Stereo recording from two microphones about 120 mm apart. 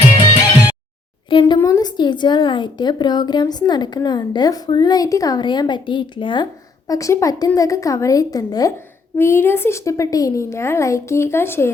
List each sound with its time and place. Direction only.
1.3 s speech: 40° left (ahead or behind)
1.5 s a woman's voice: 30° left (ahead or behind)
6.8 s a woman's voice: 30° left (ahead or behind)
9.1 s a woman's voice: 20° left (ahead or behind)